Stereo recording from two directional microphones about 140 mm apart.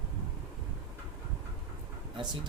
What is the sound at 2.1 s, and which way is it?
Speech, 30° right (ahead or behind).